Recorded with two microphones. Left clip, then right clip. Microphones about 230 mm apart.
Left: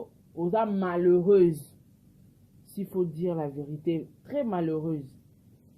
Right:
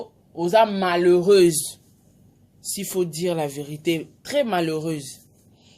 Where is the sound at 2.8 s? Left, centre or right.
Centre.